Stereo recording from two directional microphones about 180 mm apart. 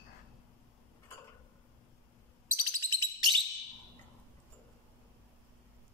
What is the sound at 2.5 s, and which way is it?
Bird, 20° right (ahead or behind).